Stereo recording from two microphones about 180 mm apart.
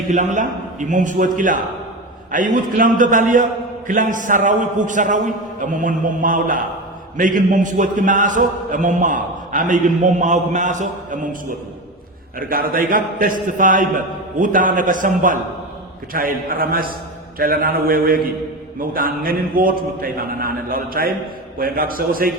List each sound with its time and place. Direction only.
0.1 s a man's voice: 40° right (ahead or behind)
12.4 s a man's voice: 55° right (ahead or behind)